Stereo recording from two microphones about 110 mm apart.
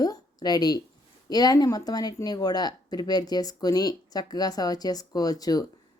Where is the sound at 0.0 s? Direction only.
35° left (ahead or behind).